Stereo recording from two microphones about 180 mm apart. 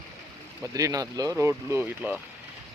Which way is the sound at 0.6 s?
20° right (ahead or behind).